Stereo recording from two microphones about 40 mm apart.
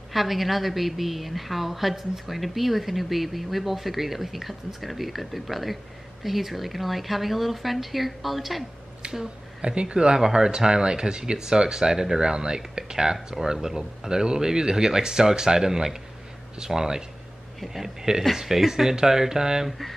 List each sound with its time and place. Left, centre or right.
0.1 s a woman's voice: centre
9.0 s speech: right